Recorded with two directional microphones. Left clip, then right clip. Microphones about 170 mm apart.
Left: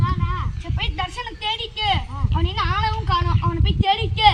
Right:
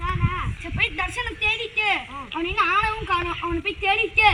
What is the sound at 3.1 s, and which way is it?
Speech, centre (ahead or behind).